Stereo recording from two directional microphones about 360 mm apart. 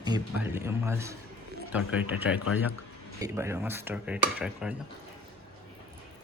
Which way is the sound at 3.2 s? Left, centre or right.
Centre.